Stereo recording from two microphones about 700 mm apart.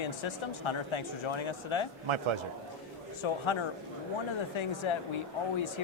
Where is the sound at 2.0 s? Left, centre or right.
Right.